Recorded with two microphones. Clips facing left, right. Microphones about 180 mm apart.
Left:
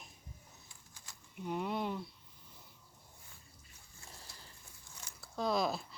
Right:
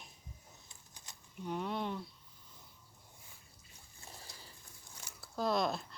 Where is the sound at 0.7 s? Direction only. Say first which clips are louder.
Right 1 dB; 20° right (ahead or behind).